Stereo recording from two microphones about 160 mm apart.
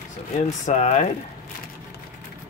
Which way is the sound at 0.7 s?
50° left (ahead or behind).